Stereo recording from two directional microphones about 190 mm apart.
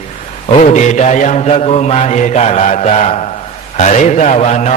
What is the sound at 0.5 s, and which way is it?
A man's voice, 40° left (ahead or behind).